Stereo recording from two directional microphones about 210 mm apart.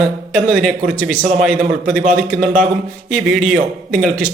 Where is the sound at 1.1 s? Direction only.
35° right (ahead or behind).